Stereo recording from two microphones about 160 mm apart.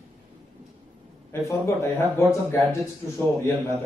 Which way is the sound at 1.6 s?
15° left (ahead or behind).